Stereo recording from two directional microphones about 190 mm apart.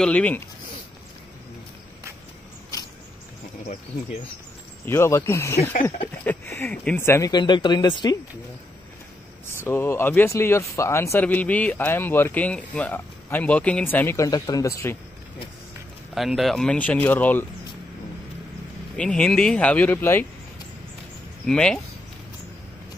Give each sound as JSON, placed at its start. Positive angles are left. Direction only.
{"t": 0.0, "sound": "speech", "side_deg": 5}
{"t": 4.8, "sound": "speech", "side_deg": 15}
{"t": 9.6, "sound": "speech", "side_deg": 10}
{"t": 16.2, "sound": "speech", "side_deg": 0}
{"t": 18.9, "sound": "speech", "side_deg": 5}
{"t": 21.5, "sound": "speech", "side_deg": 5}